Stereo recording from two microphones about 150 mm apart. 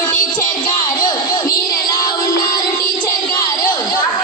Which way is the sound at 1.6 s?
25° left (ahead or behind).